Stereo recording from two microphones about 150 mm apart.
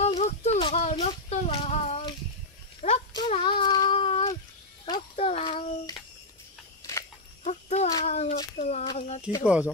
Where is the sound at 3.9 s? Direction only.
40° left (ahead or behind).